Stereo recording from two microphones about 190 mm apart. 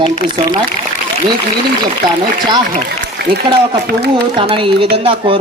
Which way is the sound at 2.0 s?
20° right (ahead or behind).